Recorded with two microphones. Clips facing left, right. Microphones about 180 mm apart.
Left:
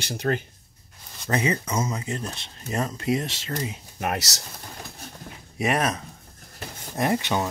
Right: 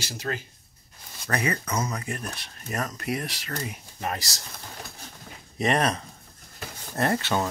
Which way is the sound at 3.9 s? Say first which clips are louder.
Left 4 dB; 70° left (ahead or behind).